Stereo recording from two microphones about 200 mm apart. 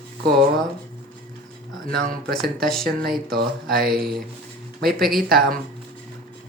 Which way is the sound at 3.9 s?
Centre (ahead or behind).